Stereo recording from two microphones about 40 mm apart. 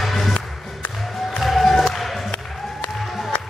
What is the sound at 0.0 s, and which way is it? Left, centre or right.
Music, centre.